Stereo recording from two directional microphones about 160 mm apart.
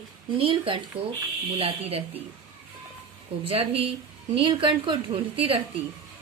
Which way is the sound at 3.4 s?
35° right (ahead or behind).